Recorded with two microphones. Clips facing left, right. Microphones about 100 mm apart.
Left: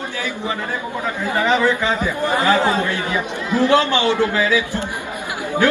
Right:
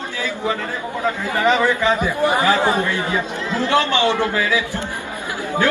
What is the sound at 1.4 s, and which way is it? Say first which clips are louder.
A man's voice: right 1 dB; 15° right (ahead or behind).